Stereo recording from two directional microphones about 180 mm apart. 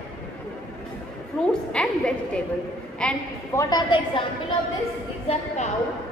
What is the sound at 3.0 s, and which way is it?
Speech, 5° left (ahead or behind).